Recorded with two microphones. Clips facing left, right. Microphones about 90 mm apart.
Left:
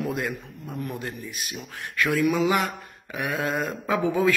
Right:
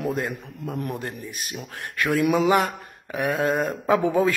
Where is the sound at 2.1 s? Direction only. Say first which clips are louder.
Right 2 dB; 55° right (ahead or behind).